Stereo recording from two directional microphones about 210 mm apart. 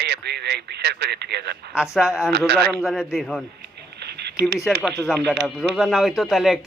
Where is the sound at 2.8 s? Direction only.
Centre (ahead or behind).